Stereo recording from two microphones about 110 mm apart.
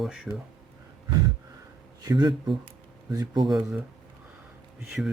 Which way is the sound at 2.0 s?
45° right (ahead or behind).